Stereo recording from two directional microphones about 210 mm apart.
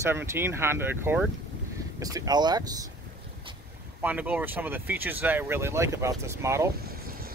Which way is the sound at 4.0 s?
10° right (ahead or behind).